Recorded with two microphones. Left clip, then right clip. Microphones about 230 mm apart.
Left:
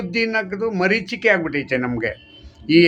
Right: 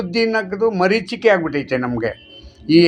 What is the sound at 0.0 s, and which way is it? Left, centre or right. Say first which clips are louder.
A man's voice: right 3 dB; centre.